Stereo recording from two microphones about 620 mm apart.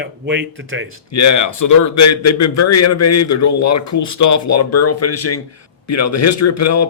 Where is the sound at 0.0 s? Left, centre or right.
Centre.